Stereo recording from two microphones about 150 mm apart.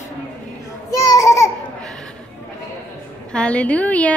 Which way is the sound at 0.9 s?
25° left (ahead or behind).